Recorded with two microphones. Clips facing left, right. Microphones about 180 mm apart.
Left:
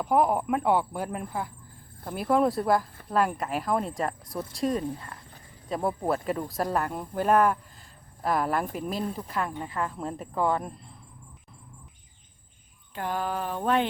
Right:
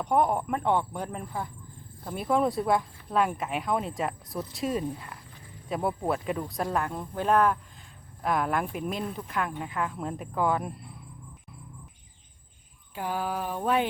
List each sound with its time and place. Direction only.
0.0 s speech: 5° left (ahead or behind)
8.9 s speech: 35° left (ahead or behind)
9.1 s speech: centre (ahead or behind)
12.9 s speech: 10° right (ahead or behind)